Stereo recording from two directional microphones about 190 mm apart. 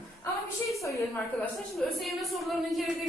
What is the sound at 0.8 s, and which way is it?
Speech, 15° left (ahead or behind).